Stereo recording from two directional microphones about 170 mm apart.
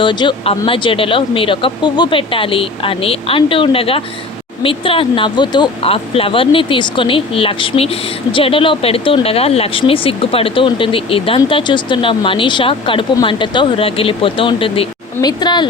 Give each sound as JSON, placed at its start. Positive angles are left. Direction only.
{"t": 0.0, "sound": "speech", "side_deg": 30}